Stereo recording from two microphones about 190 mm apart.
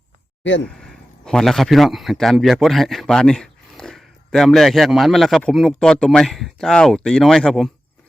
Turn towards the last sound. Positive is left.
turn(degrees=0)  # may be behind; listen again after turning